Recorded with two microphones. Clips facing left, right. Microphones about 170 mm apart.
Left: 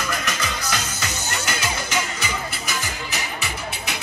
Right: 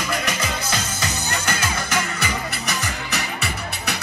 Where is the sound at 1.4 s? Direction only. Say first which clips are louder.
Right 1 dB; 60° right (ahead or behind).